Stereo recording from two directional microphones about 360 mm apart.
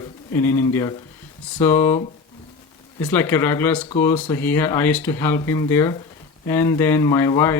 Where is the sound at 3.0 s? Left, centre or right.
Centre.